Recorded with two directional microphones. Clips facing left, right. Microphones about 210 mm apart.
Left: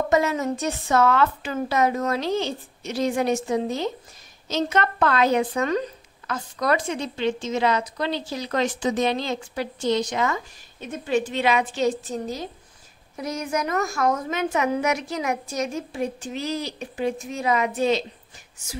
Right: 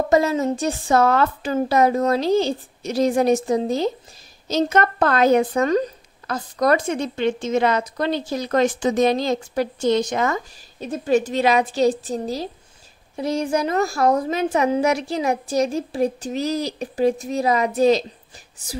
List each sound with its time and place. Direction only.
0.1 s a woman's voice: 35° right (ahead or behind)